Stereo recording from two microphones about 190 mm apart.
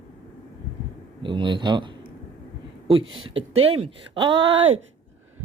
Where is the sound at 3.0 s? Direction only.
90° right.